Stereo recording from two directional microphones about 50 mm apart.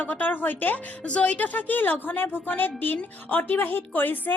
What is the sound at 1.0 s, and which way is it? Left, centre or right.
A woman's voice, left.